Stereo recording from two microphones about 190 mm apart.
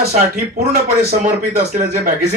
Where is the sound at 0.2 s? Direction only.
55° right (ahead or behind).